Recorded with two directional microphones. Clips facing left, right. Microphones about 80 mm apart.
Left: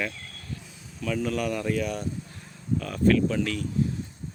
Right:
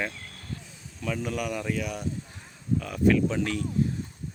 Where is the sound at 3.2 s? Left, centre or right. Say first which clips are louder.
Left 1 dB; right.